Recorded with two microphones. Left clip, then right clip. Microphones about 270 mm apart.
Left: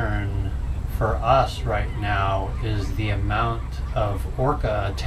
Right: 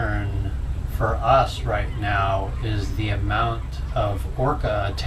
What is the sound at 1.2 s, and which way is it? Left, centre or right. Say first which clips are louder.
Speech: right 1 dB; centre.